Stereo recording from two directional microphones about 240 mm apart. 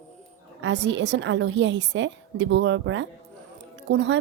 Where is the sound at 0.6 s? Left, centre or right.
Right.